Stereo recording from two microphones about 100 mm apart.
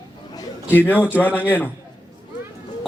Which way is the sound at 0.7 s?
20° left (ahead or behind).